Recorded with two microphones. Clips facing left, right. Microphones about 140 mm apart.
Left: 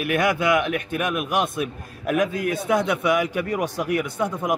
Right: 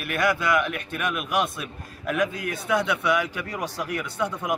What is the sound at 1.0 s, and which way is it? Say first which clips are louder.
A man's voice: left 1 dB; 45° left (ahead or behind).